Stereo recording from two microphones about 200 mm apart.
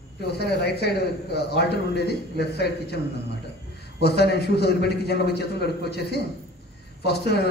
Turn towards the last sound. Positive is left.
turn(degrees=55)  # may be behind; listen again after turning